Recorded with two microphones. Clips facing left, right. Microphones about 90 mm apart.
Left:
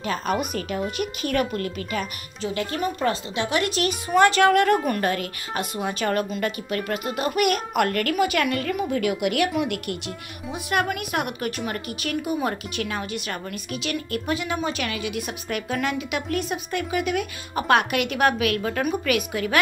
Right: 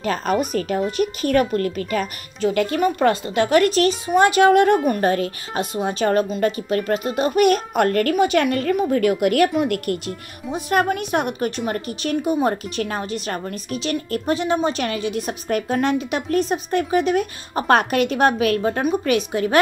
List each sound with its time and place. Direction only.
0.0 s a woman's voice: 45° right (ahead or behind)
2.5 s speech: 65° right (ahead or behind); by 3.9 s 40° right (ahead or behind)
4.1 s a woman's voice: 20° right (ahead or behind)